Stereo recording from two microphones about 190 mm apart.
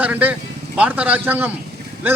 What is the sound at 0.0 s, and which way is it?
A man's voice, 10° right (ahead or behind).